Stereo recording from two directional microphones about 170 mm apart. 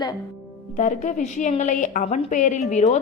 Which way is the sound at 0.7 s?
50° left (ahead or behind).